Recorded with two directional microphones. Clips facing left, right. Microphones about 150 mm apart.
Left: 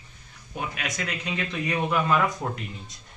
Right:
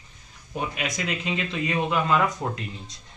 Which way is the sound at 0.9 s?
20° right (ahead or behind).